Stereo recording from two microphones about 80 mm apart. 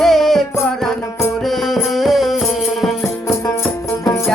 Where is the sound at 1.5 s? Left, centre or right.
Centre.